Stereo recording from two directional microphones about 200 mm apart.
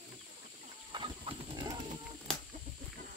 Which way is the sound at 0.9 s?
25° right (ahead or behind).